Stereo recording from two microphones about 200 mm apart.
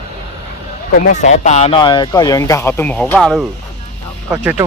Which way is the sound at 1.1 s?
35° left (ahead or behind).